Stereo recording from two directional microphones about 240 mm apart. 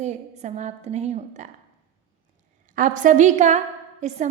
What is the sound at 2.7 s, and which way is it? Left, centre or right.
A woman's voice, right.